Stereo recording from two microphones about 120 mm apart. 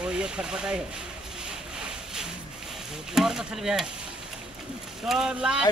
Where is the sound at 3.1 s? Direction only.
5° right (ahead or behind).